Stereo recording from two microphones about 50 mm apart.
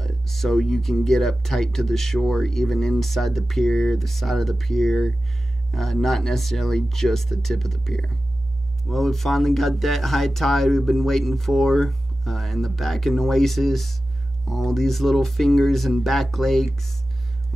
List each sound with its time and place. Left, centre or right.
0.0 s speech: centre